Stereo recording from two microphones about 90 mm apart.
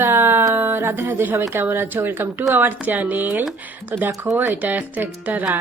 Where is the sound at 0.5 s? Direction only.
25° right (ahead or behind).